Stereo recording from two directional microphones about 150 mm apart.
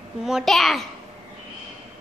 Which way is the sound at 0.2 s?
5° right (ahead or behind).